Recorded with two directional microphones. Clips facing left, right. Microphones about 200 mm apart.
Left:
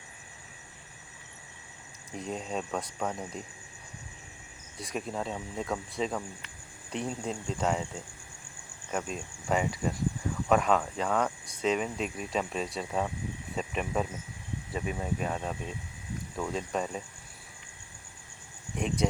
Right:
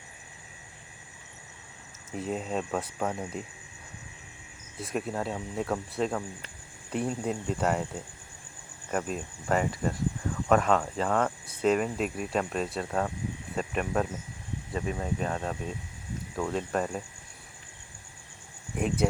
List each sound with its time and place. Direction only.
2.1 s speech: 5° right (ahead or behind)
4.8 s speech: 5° right (ahead or behind)
18.8 s speech: 5° right (ahead or behind)